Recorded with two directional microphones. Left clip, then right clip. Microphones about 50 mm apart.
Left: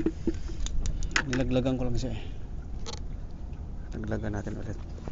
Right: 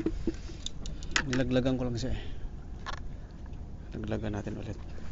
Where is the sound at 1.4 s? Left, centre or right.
Right.